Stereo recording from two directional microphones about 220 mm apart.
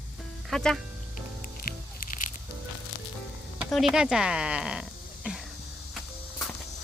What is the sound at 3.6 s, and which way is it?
Speech, centre (ahead or behind).